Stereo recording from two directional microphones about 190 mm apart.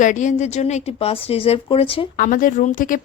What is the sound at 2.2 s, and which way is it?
Speech, 45° left (ahead or behind).